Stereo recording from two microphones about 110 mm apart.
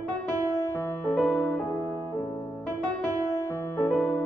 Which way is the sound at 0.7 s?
20° left (ahead or behind).